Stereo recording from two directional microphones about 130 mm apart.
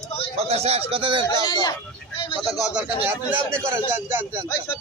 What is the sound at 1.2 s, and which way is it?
Speech, 30° left (ahead or behind).